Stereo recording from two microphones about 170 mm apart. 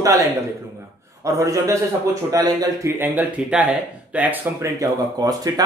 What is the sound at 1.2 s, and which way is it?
Speech, 20° right (ahead or behind).